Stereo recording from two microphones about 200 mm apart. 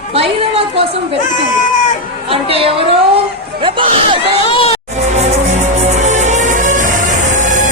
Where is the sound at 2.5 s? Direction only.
30° right (ahead or behind).